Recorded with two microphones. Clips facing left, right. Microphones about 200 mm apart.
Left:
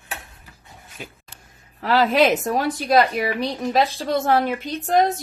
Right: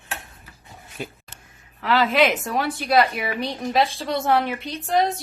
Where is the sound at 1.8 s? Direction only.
40° left (ahead or behind).